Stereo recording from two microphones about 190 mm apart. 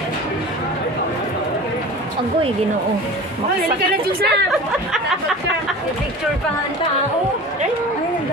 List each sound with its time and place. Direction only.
3.9 s a woman's voice: 55° right (ahead or behind)